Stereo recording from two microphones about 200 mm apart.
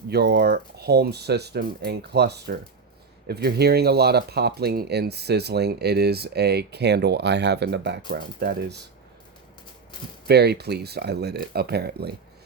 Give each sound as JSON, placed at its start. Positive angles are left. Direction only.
{"t": 0.1, "sound": "speech", "side_deg": -55}
{"t": 10.2, "sound": "speech", "side_deg": -55}